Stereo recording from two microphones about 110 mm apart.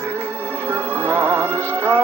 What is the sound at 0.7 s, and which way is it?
Music, 20° right (ahead or behind).